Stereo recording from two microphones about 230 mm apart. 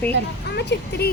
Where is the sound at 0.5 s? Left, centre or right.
Left.